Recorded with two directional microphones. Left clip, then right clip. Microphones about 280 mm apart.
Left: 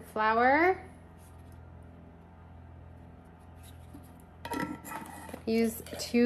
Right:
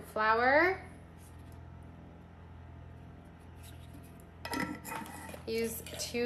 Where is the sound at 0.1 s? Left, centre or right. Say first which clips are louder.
Left 2 dB; left.